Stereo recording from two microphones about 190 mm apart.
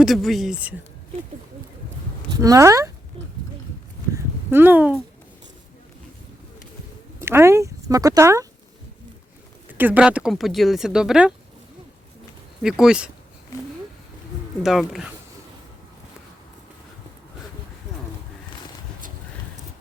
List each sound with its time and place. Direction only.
0.0 s speech: centre (ahead or behind)
2.3 s speech: 20° right (ahead or behind)
4.5 s speech: 10° right (ahead or behind)
7.3 s speech: 15° right (ahead or behind)
9.6 s speech: 10° right (ahead or behind)
12.6 s speech: 5° right (ahead or behind)
14.6 s speech: centre (ahead or behind)